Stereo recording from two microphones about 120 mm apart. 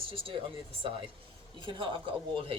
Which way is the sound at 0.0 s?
50° right (ahead or behind).